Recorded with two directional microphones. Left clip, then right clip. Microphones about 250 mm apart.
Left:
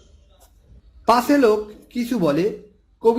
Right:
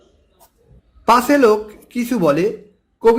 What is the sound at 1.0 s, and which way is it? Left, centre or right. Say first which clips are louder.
Speech: right 4 dB; centre.